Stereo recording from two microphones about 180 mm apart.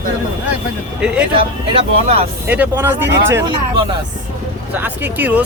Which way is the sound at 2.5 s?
10° right (ahead or behind).